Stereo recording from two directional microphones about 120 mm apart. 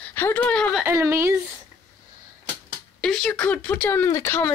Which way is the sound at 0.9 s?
20° right (ahead or behind).